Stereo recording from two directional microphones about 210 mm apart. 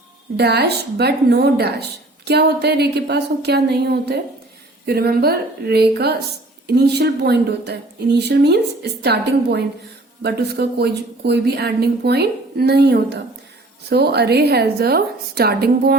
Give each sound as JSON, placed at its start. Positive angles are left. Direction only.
{"t": 0.3, "sound": "a woman's voice", "side_deg": -50}